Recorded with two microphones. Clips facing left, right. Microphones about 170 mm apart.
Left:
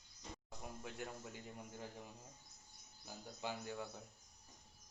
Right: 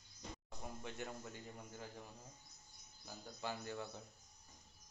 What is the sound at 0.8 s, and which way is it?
Speech, 5° left (ahead or behind).